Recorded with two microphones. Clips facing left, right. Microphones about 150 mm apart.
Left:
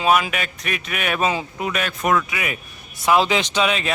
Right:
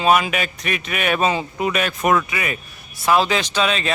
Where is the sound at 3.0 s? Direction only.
15° left (ahead or behind).